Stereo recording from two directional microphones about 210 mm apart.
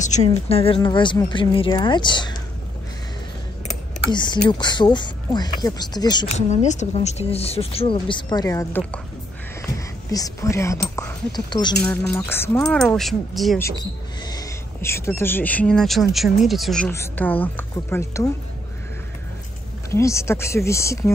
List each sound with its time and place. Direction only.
0.0 s speech: 35° left (ahead or behind)
4.1 s speech: 20° left (ahead or behind)
6.3 s speech: 35° left (ahead or behind); by 9.0 s 10° left (ahead or behind)
10.1 s speech: 15° left (ahead or behind); by 13.6 s centre (ahead or behind)
14.2 s speech: 15° left (ahead or behind)
19.9 s speech: 15° left (ahead or behind)